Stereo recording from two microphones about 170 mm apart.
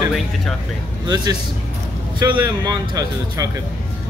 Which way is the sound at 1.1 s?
25° right (ahead or behind).